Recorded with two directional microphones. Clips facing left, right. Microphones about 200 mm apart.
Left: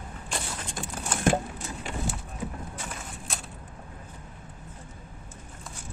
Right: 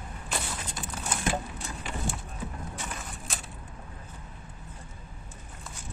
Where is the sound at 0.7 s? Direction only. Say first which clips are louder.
Left 4 dB; 50° left (ahead or behind).